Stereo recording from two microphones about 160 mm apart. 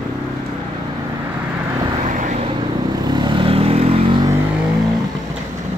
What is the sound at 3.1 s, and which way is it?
Vehicle, 30° right (ahead or behind).